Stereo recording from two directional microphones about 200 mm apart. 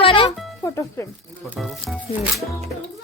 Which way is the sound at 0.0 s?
25° left (ahead or behind).